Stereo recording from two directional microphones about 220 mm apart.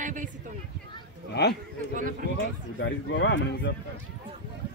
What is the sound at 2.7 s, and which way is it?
Speech, 55° left (ahead or behind).